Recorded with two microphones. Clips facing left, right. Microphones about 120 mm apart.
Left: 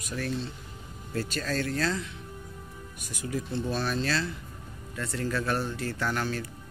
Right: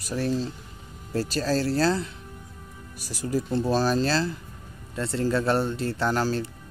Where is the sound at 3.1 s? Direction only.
35° right (ahead or behind).